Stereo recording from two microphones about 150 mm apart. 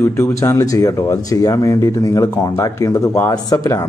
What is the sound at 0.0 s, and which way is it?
Speech, 15° left (ahead or behind).